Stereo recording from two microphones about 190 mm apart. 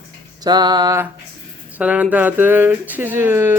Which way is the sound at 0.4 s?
20° right (ahead or behind).